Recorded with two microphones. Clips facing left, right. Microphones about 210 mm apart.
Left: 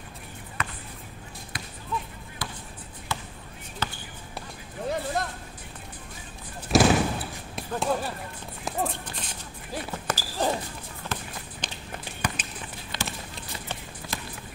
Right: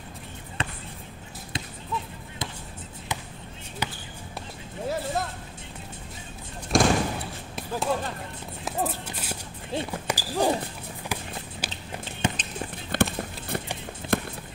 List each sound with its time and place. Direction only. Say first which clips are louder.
0.6 s basketball bounce: right 2 dB; 30° right (ahead or behind)
3.1 s basketball bounce: left 1 dB; 15° right (ahead or behind)
4.8 s a sound: even; 5° right (ahead or behind)
6.7 s slam: left 2 dB; 5° left (ahead or behind)
7.5 s basketball bounce: even; centre (ahead or behind)
8.6 s a sound: right 1 dB; 5° right (ahead or behind)
9.8 s run: right 1 dB; 15° right (ahead or behind)
11.1 s a sound: right 1 dB; 10° right (ahead or behind)
11.6 s walk: even; 10° right (ahead or behind)
12.2 s run: right 4 dB; 25° right (ahead or behind)
12.9 s run: right 11 dB; 55° right (ahead or behind)
14.0 s a sound: right 11 dB; 25° right (ahead or behind)